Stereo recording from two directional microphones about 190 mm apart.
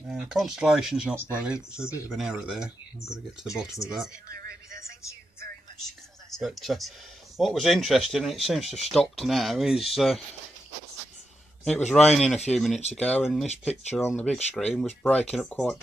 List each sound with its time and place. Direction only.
0.1 s speech: 5° right (ahead or behind)
1.8 s speech: 15° left (ahead or behind)
2.0 s speech: 5° right (ahead or behind)
5.9 s a sound: centre (ahead or behind)
7.3 s speech: centre (ahead or behind)
11.9 s speech: centre (ahead or behind)